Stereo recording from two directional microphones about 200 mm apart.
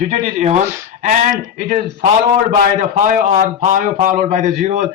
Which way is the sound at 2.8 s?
40° right (ahead or behind).